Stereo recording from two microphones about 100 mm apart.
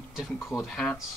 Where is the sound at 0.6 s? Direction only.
5° left (ahead or behind).